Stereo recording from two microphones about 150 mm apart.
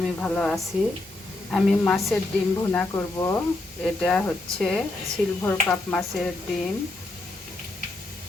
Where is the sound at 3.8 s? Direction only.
5° left (ahead or behind).